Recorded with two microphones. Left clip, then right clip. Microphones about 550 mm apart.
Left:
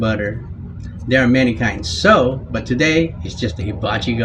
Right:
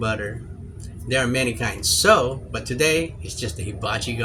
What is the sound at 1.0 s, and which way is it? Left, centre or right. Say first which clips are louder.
Speech: left 7 dB; right.